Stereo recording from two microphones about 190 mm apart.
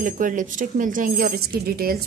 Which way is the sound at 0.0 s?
45° right (ahead or behind).